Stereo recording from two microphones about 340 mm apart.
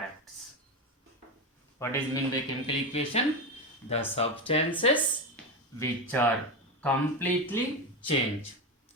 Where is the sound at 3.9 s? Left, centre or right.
Centre.